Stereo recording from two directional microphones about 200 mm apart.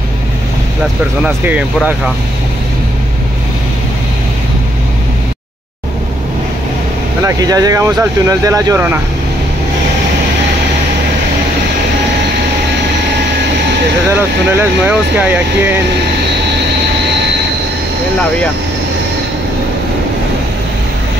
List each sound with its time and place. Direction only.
1.2 s speech: 5° right (ahead or behind)
7.2 s speech: 20° right (ahead or behind)
14.1 s speech: 5° right (ahead or behind)